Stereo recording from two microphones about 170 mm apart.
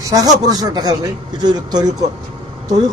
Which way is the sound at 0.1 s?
20° right (ahead or behind).